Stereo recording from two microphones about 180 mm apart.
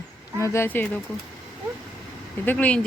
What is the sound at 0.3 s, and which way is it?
Speech, 15° left (ahead or behind).